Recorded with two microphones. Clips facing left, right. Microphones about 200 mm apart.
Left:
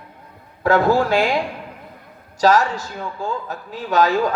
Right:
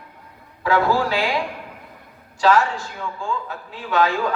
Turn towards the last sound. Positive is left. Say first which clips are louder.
# left 3 dB
turn(degrees=40)  # may be behind; listen again after turning